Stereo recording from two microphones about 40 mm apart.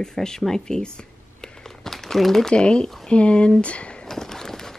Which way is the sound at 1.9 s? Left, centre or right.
Centre.